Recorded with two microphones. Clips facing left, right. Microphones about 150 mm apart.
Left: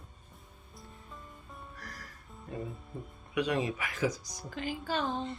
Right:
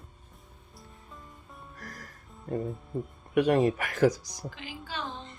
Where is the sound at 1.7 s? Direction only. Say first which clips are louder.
Right 2 dB; 45° right (ahead or behind).